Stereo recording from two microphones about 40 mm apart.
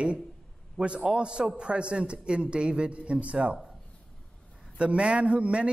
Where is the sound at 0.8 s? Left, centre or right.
Centre.